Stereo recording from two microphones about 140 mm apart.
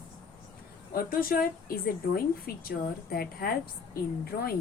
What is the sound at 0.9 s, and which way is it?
A woman's voice, 90° left.